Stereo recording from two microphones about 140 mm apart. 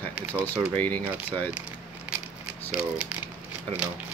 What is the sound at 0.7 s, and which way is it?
Speech, 10° left (ahead or behind).